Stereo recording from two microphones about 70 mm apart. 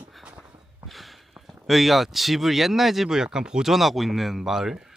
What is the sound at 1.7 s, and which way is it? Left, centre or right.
Speech, centre.